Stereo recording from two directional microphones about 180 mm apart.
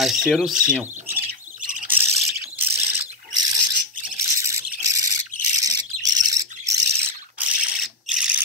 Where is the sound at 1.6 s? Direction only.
45° right (ahead or behind).